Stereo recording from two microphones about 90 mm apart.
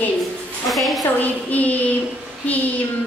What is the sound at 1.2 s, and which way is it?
Speech, 15° left (ahead or behind).